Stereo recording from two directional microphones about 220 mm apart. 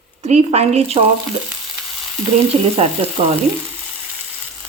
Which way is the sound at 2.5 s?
25° right (ahead or behind).